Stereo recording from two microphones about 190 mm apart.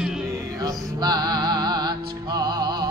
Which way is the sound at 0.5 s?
20° right (ahead or behind).